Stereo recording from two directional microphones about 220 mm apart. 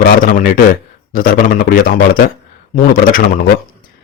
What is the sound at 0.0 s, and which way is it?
A man's voice, 40° left (ahead or behind).